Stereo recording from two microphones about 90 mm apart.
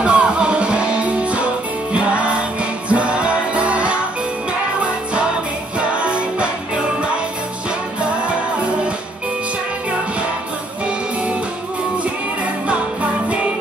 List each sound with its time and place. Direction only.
0.0 s music: 10° right (ahead or behind)
5.8 s music: 10° right (ahead or behind)
12.6 s music: 15° right (ahead or behind)